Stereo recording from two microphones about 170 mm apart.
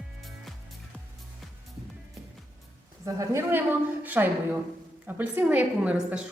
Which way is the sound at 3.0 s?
20° right (ahead or behind).